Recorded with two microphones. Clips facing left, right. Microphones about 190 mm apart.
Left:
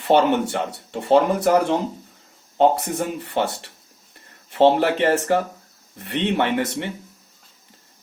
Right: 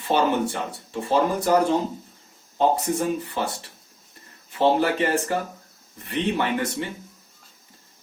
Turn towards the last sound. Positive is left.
turn(degrees=70)  # may be behind; listen again after turning